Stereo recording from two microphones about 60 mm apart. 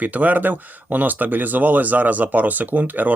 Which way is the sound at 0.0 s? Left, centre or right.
Right.